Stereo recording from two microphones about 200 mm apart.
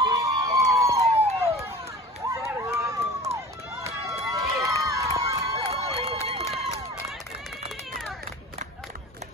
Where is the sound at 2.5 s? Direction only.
15° right (ahead or behind).